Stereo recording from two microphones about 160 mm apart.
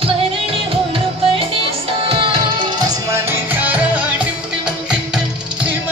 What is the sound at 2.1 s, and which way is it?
Music, 30° right (ahead or behind).